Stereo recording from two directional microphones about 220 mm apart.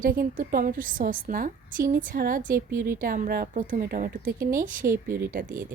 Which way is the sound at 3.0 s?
40° right (ahead or behind).